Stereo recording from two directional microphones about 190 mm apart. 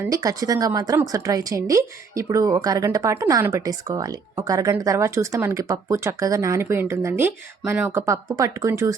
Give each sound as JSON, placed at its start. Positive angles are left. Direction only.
{"t": 0.0, "sound": "a woman's voice", "side_deg": -15}